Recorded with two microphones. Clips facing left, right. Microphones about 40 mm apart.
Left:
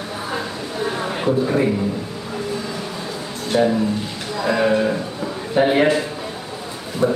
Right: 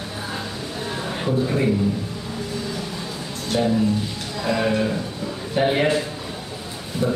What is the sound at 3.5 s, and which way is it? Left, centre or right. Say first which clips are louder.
A man's voice: left 3 dB; centre.